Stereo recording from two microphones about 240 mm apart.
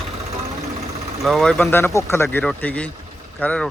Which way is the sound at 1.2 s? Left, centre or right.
Centre.